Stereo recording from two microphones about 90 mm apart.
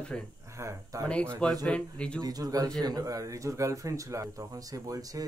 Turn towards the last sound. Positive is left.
turn(degrees=-40)  # may be behind; listen again after turning